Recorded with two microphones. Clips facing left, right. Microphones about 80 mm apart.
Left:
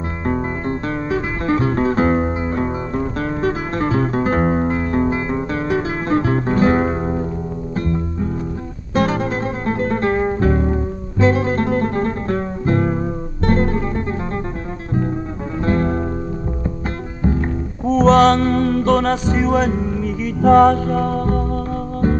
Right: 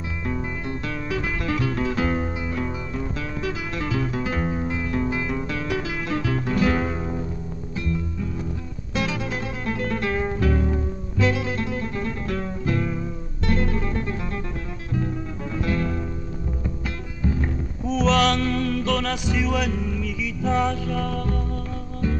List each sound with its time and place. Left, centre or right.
0.3 s music: left
15.6 s music: left
17.2 s music: left
20.3 s music: left